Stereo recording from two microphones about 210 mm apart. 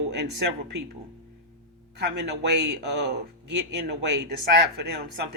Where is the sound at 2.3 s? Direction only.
55° right (ahead or behind).